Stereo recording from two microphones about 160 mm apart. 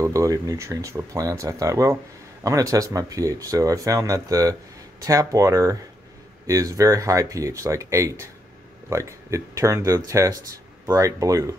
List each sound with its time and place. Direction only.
0.0 s speech: 20° right (ahead or behind)